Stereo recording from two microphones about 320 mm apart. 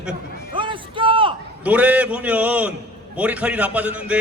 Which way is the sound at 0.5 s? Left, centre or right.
Centre.